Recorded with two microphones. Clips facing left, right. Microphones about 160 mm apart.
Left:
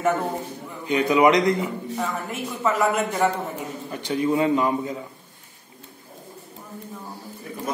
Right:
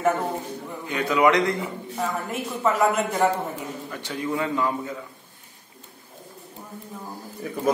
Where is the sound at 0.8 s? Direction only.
20° left (ahead or behind).